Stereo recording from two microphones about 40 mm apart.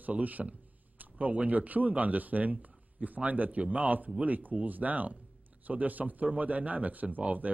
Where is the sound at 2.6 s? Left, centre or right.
Right.